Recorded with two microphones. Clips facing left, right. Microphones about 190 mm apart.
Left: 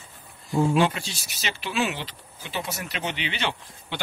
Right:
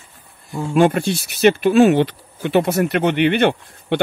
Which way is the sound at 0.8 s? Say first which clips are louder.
Right 9 dB; 55° right (ahead or behind).